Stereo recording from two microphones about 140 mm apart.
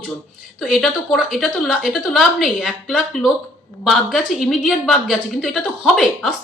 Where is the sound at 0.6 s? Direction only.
Centre (ahead or behind).